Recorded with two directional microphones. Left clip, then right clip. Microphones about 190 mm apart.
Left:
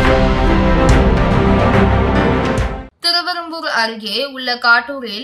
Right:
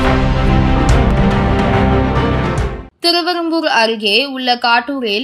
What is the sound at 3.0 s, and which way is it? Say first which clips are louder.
A woman's voice: right 3 dB; 15° right (ahead or behind).